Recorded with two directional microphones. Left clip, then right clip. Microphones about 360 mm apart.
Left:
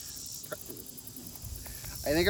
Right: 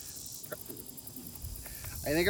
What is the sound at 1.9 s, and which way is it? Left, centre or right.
Snake, centre.